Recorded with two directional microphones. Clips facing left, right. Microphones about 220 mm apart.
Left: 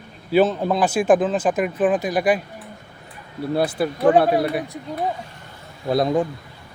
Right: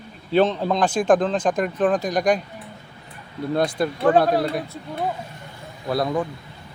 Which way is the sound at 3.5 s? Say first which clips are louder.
Left 1 dB; 5° left (ahead or behind).